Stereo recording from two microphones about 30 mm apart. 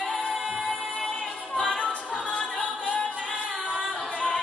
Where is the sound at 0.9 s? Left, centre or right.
Left.